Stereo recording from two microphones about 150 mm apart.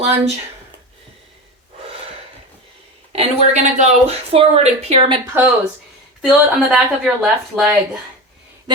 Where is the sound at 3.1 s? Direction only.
50° right (ahead or behind).